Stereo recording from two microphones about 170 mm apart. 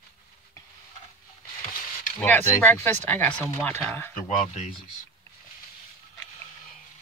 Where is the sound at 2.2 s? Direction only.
10° left (ahead or behind).